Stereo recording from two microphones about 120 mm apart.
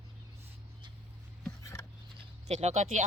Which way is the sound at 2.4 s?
70° right (ahead or behind).